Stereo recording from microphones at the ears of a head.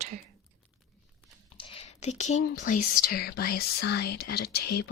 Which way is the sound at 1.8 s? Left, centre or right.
Left.